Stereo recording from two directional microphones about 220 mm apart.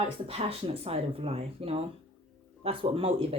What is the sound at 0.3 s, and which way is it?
Speech, 25° right (ahead or behind).